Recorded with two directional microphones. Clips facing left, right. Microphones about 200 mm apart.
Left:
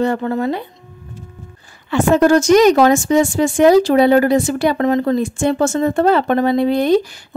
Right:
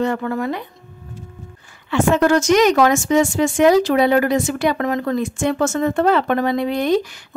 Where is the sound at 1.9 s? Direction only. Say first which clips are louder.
Left 3 dB; 35° left (ahead or behind).